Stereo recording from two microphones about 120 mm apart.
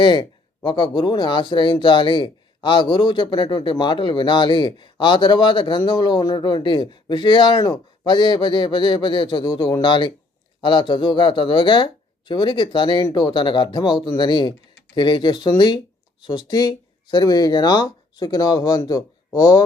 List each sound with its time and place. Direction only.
0.0 s speech: 40° left (ahead or behind)